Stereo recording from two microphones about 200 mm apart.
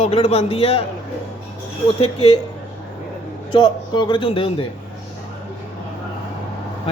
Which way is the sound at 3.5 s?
20° left (ahead or behind).